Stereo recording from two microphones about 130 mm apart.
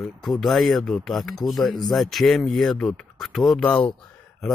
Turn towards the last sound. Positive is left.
turn(degrees=10)  # may be behind; listen again after turning